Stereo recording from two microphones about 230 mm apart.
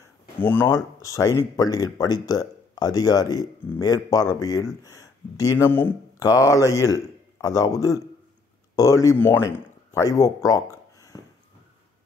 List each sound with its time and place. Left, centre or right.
0.4 s speech: centre